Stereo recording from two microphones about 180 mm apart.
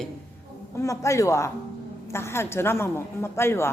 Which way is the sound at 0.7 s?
15° left (ahead or behind).